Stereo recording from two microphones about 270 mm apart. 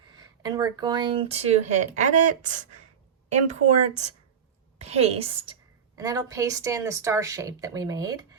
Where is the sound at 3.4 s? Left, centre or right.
Right.